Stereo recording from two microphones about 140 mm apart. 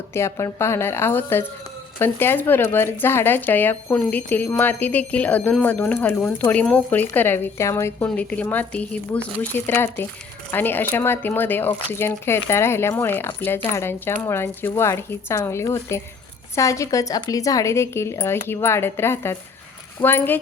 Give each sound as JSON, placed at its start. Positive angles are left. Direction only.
{"t": 0.1, "sound": "speech", "side_deg": 20}